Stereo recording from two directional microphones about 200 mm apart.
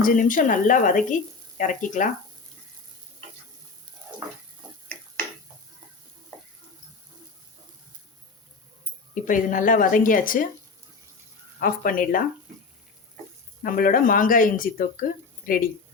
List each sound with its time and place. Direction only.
0.0 s speech: 40° left (ahead or behind)
9.1 s speech: 40° left (ahead or behind)
11.6 s speech: 45° left (ahead or behind)
13.6 s speech: 45° left (ahead or behind)